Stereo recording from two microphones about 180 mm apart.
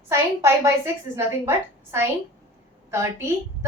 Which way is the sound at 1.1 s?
15° right (ahead or behind).